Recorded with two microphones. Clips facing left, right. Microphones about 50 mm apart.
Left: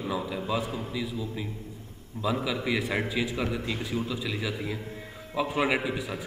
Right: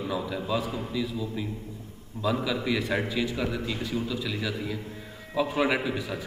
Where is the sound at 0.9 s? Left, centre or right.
Centre.